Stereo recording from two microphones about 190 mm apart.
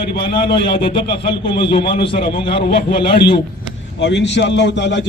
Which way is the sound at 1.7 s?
60° left (ahead or behind).